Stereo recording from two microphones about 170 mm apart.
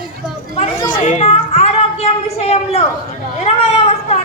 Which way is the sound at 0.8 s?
45° left (ahead or behind).